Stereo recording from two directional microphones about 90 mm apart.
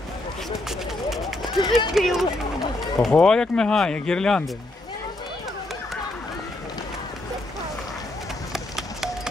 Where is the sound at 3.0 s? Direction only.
5° left (ahead or behind).